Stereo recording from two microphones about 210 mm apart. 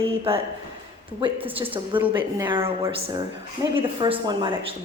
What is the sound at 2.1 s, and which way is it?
A woman's voice, 20° right (ahead or behind).